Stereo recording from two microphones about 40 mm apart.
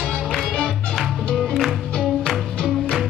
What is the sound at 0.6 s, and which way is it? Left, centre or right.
Music, centre.